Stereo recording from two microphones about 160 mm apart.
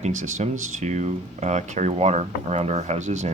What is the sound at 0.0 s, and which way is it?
Speech, 50° right (ahead or behind).